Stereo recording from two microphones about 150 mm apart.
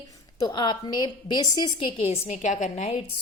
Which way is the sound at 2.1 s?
50° left (ahead or behind).